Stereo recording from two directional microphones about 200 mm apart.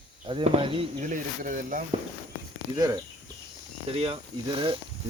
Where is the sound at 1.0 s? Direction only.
40° right (ahead or behind).